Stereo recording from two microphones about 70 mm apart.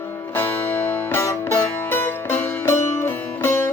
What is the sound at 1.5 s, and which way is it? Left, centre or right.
Music, left.